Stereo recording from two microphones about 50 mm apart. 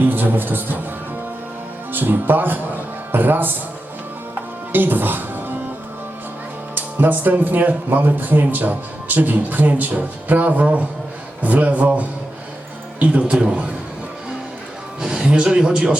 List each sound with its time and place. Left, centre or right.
0.0 s a man's voice: right
1.9 s a man's voice: right
4.7 s speech: right
6.7 s a man's voice: right
15.0 s a man's voice: centre